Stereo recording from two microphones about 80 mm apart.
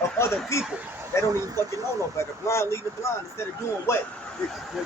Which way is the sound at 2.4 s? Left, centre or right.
Left.